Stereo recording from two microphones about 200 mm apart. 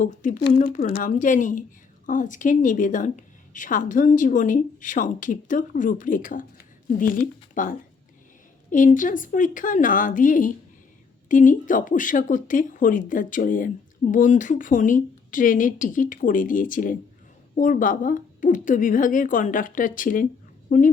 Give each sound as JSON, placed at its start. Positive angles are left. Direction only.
{"t": 0.0, "sound": "a woman's voice", "side_deg": 40}
{"t": 0.3, "sound": "speech", "side_deg": 55}
{"t": 1.1, "sound": "a woman's voice", "side_deg": 40}